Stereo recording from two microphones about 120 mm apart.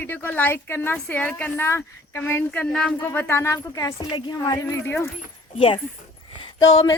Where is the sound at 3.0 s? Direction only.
20° left (ahead or behind).